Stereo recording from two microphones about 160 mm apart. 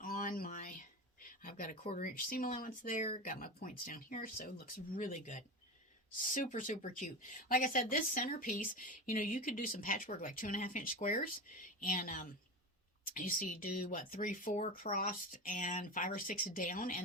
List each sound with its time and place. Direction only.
0.0 s a sound: 60° left (ahead or behind)
1.7 s speech: 45° left (ahead or behind)
2.0 s speech: 60° left (ahead or behind)